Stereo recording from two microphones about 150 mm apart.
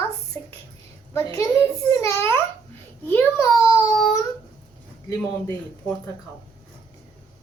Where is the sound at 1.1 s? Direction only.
20° left (ahead or behind).